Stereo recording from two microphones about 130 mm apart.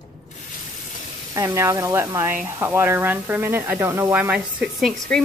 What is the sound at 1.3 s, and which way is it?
A woman's voice, 20° right (ahead or behind).